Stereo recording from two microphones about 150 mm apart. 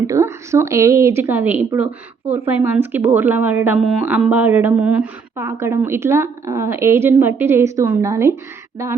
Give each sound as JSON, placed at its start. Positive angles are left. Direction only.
{"t": 0.1, "sound": "a woman's voice", "side_deg": -20}